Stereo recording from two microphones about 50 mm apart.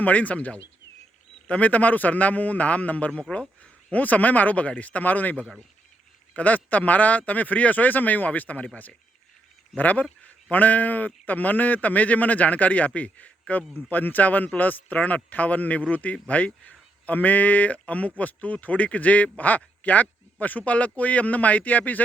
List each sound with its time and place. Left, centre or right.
0.0 s speech: left
3.3 s speech: centre
3.9 s speech: left